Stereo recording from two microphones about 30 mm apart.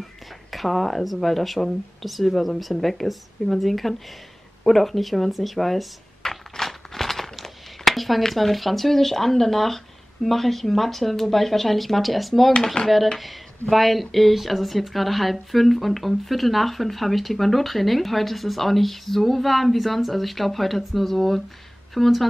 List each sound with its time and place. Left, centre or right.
0.5 s speech: centre
4.6 s a sound: centre
8.2 s speech: centre
12.8 s speech: left
13.2 s speech: centre